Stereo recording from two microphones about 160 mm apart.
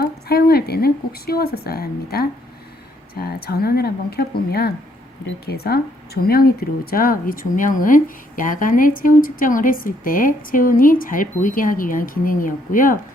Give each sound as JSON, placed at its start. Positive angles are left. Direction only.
{"t": 0.0, "sound": "speech", "side_deg": 75}